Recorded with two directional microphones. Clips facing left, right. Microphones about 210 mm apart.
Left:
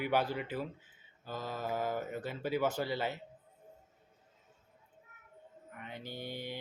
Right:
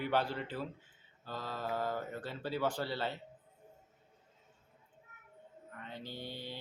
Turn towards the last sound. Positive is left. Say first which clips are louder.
# left 3 dB
turn(degrees=15)  # may be behind; listen again after turning